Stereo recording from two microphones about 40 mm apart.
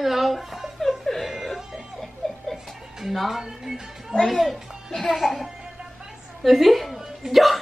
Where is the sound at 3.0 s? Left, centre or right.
Centre.